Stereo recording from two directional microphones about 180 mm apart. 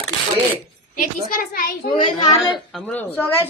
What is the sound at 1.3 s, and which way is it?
Speech, 55° left (ahead or behind).